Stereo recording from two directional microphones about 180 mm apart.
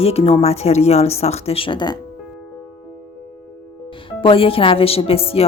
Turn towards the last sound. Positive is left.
turn(degrees=30)  # may be behind; listen again after turning